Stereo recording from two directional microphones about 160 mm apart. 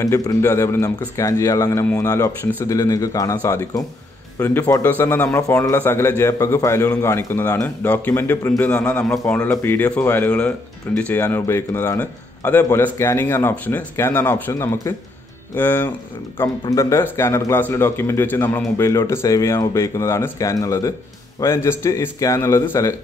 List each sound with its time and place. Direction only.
0.0 s a man's voice: 20° left (ahead or behind)